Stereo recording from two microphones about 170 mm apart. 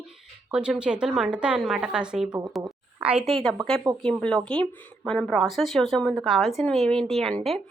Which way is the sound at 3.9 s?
25° right (ahead or behind).